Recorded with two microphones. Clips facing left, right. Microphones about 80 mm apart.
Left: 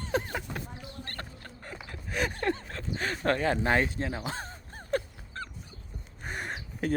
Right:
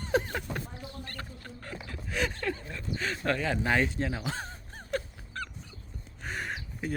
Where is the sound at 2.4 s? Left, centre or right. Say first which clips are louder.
Left 4 dB; left.